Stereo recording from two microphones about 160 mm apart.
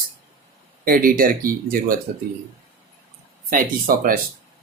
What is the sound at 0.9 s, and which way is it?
Speech, 60° right (ahead or behind).